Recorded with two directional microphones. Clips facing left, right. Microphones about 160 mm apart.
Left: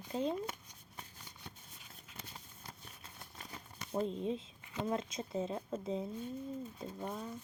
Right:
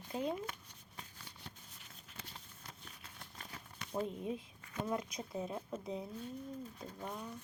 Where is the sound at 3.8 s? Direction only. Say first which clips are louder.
Left 3 dB; 20° left (ahead or behind).